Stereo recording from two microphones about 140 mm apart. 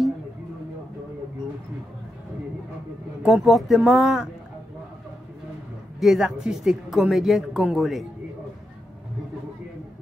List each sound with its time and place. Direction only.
3.2 s speech: 5° right (ahead or behind)
5.9 s speech: centre (ahead or behind)